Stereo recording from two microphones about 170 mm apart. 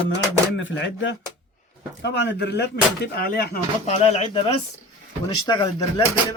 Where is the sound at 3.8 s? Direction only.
40° left (ahead or behind).